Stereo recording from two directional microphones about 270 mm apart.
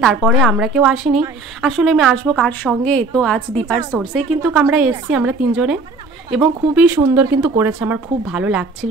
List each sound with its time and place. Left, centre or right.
0.0 s speech: centre